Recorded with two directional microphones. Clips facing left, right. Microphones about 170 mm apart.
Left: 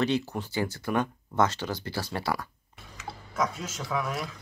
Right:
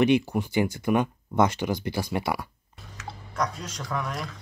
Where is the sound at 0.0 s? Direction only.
15° right (ahead or behind).